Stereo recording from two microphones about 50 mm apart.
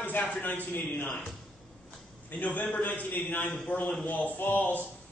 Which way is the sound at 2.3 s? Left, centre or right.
Left.